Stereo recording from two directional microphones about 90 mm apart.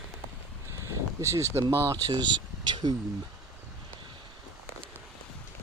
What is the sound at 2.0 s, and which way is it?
Speech, 55° right (ahead or behind).